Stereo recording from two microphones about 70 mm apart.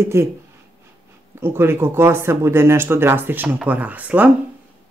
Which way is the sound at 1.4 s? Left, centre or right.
Right.